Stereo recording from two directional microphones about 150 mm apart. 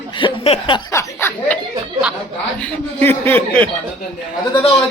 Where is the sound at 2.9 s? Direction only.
15° left (ahead or behind).